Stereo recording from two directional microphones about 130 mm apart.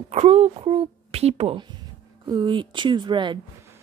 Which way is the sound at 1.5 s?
35° right (ahead or behind).